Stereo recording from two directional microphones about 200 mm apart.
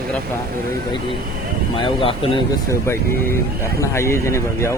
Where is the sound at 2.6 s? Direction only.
15° left (ahead or behind).